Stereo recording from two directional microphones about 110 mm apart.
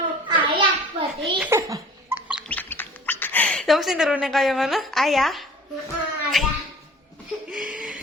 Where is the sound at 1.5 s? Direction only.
25° right (ahead or behind).